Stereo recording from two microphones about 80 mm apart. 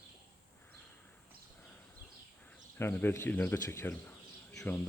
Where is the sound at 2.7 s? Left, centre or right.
Left.